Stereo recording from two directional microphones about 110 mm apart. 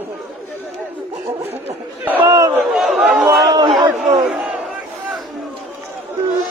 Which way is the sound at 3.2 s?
35° right (ahead or behind).